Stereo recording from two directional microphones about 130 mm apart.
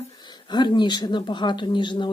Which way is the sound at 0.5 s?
35° left (ahead or behind).